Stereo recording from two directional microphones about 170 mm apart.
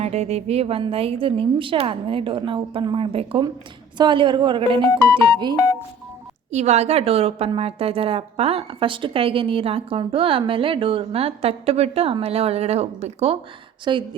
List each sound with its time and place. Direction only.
0.0 s a woman's voice: 40° right (ahead or behind)
6.5 s a woman's voice: 40° right (ahead or behind)
13.9 s a woman's voice: 25° right (ahead or behind)